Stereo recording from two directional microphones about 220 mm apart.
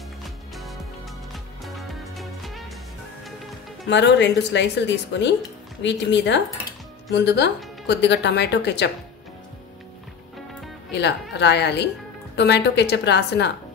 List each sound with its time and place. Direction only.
0.2 s music: centre (ahead or behind)
3.9 s speech: 50° left (ahead or behind)
10.9 s speech: 50° left (ahead or behind)